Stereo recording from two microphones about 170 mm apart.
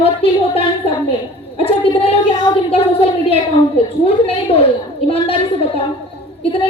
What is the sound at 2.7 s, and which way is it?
A woman's voice, 35° left (ahead or behind).